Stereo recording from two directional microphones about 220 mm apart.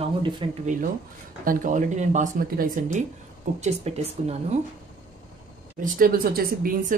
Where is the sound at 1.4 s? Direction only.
40° right (ahead or behind).